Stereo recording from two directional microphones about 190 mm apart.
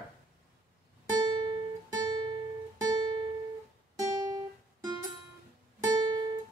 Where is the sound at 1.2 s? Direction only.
20° right (ahead or behind).